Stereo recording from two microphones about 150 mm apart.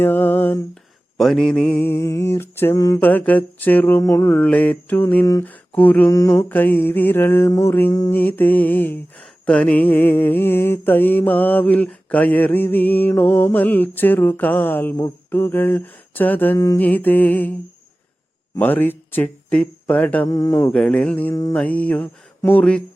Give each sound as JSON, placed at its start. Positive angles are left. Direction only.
{"t": 0.0, "sound": "a sound", "side_deg": 15}
{"t": 1.2, "sound": "mantra", "side_deg": 5}
{"t": 1.8, "sound": "mantra", "side_deg": 15}
{"t": 3.0, "sound": "mantra", "side_deg": 10}
{"t": 18.5, "sound": "speech", "side_deg": 10}
{"t": 20.2, "sound": "mantra", "side_deg": 25}
{"t": 22.4, "sound": "speech", "side_deg": 15}